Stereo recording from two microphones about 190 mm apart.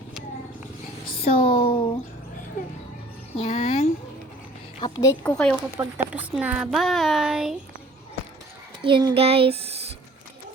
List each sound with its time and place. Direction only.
1.2 s speech: 30° left (ahead or behind)
3.3 s speech: 35° left (ahead or behind)
4.8 s a woman's voice: 15° left (ahead or behind)
5.3 s speech: 5° left (ahead or behind)
5.7 s speech: 10° right (ahead or behind)
8.8 s a sound: 25° right (ahead or behind)